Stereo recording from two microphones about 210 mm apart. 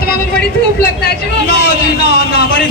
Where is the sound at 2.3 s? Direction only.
50° left (ahead or behind).